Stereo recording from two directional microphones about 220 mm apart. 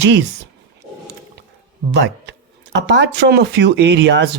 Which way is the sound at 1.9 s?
50° right (ahead or behind).